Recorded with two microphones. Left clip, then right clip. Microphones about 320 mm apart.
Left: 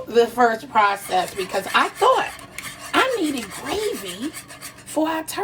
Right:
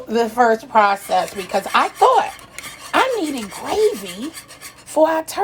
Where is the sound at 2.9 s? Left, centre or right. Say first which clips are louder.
Right 2 dB; centre.